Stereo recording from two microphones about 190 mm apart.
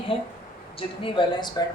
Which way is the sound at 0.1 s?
30° left (ahead or behind).